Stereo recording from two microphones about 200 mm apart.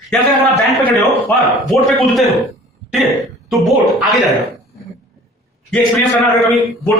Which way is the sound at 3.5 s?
Centre (ahead or behind).